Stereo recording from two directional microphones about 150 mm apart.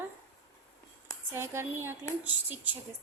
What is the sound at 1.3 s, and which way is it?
Speech, 15° right (ahead or behind).